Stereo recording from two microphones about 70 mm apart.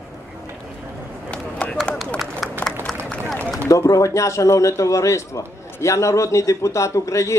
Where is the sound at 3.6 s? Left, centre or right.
Left.